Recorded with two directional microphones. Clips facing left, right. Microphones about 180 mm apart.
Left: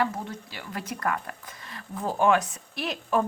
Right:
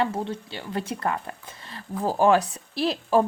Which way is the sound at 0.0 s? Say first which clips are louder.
Right 3 dB; 30° right (ahead or behind).